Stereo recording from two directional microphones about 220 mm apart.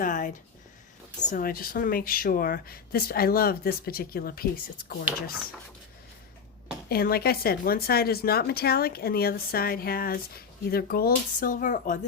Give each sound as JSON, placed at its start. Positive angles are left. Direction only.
{"t": 0.0, "sound": "speech", "side_deg": 35}
{"t": 6.8, "sound": "speech", "side_deg": 45}